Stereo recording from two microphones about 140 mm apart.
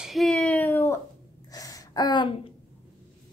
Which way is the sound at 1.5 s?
25° left (ahead or behind).